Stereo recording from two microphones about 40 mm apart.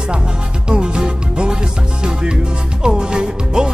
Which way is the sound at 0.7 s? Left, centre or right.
Right.